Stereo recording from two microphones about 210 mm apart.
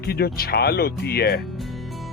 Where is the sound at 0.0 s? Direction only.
45° left (ahead or behind).